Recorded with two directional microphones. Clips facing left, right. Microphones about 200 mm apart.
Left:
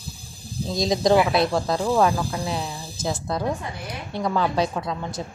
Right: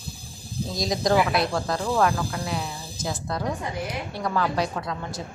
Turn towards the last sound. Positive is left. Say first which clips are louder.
# left 3 dB
turn(degrees=25)  # may be behind; listen again after turning